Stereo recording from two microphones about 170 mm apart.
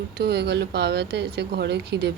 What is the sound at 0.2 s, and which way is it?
Speech, 75° right (ahead or behind).